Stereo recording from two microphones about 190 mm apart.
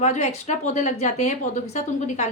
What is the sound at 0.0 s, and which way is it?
A woman's voice, 35° left (ahead or behind).